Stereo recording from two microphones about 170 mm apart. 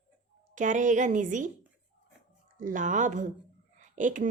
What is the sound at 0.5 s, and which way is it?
Speech, 50° right (ahead or behind).